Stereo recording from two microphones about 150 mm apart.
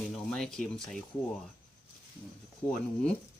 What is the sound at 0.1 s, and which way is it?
Speech, 5° left (ahead or behind).